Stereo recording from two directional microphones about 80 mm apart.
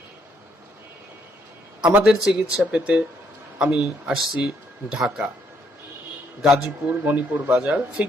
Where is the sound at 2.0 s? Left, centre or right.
Centre.